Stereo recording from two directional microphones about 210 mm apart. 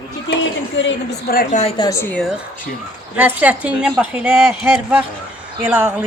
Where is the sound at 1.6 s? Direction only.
20° left (ahead or behind); by 2.4 s centre (ahead or behind).